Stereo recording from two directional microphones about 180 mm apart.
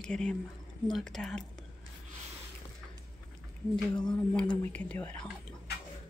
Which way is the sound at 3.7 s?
5° left (ahead or behind).